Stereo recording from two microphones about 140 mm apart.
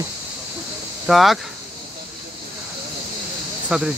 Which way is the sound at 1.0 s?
Centre (ahead or behind).